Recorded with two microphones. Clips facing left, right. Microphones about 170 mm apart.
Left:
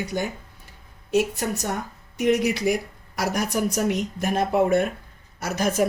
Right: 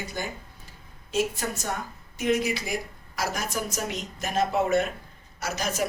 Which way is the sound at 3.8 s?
55° left (ahead or behind).